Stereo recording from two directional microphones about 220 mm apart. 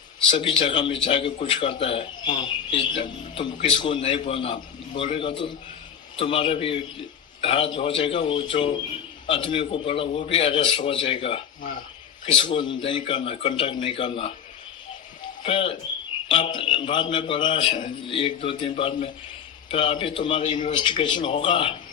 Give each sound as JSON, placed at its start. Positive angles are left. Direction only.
{"t": 0.3, "sound": "speech", "side_deg": 20}
{"t": 15.4, "sound": "speech", "side_deg": 25}